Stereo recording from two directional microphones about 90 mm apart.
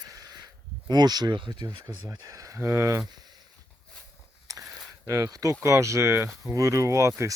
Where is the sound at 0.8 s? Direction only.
50° right (ahead or behind).